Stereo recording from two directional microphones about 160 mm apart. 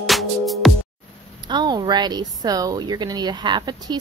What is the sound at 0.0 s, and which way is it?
Music, centre (ahead or behind).